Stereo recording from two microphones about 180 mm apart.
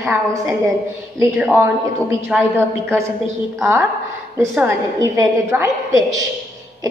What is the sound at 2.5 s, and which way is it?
Speech, 15° right (ahead or behind).